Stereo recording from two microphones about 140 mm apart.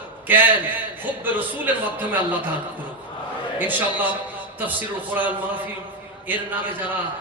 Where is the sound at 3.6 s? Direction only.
15° right (ahead or behind).